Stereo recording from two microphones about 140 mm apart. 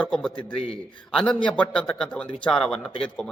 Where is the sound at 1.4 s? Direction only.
10° left (ahead or behind).